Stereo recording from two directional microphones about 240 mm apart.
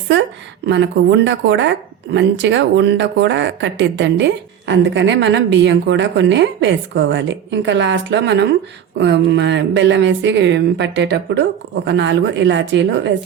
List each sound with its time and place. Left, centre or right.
0.1 s speech: right